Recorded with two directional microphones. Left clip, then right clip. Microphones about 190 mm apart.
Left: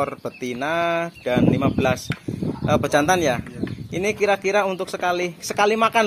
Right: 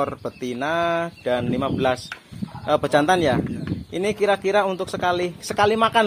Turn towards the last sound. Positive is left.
turn(degrees=-5)  # may be behind; listen again after turning